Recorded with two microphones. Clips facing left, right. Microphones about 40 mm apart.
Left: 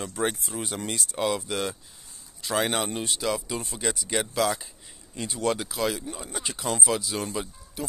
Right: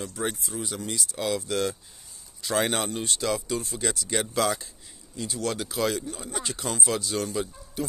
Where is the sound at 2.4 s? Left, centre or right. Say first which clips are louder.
Even; centre.